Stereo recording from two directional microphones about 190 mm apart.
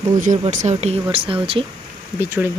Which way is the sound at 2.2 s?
10° right (ahead or behind).